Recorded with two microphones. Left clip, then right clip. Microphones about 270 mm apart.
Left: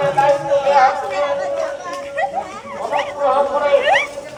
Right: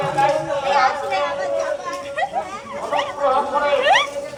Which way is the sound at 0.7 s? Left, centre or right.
Centre.